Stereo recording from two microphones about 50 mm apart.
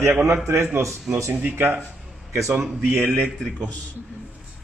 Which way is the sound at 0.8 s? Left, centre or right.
Right.